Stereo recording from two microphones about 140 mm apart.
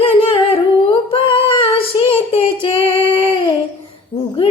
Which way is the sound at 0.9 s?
40° left (ahead or behind).